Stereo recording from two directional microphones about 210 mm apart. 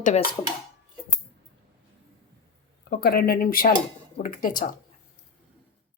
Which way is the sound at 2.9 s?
50° left (ahead or behind).